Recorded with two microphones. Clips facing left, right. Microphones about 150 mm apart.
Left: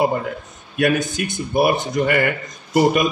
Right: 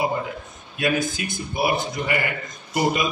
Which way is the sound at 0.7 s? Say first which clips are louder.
Left 5 dB; 60° left (ahead or behind).